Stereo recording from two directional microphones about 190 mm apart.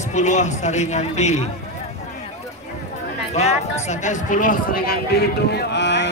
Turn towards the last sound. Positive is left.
turn(degrees=65)  # may be behind; listen again after turning